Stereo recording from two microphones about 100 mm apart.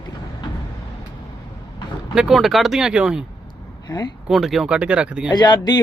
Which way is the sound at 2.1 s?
5° right (ahead or behind).